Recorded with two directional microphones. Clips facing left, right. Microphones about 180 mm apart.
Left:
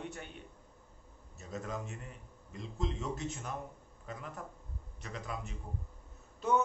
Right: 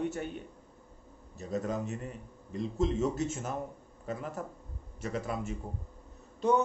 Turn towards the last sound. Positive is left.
turn(degrees=-35)  # may be behind; listen again after turning